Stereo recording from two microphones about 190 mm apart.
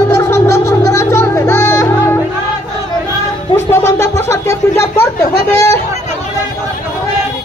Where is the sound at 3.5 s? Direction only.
15° left (ahead or behind).